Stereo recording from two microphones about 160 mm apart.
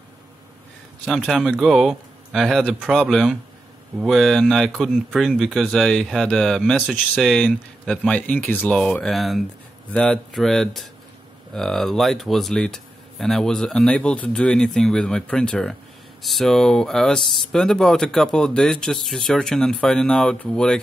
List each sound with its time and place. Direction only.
1.0 s speech: centre (ahead or behind)